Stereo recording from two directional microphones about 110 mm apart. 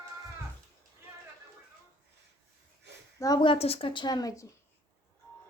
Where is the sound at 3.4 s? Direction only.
60° left (ahead or behind); by 4.4 s 35° left (ahead or behind).